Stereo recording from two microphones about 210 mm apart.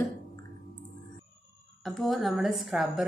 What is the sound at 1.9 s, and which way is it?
A woman's voice, centre (ahead or behind).